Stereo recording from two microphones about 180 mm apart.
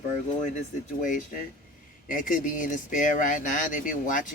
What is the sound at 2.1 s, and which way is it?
Speech, 50° left (ahead or behind).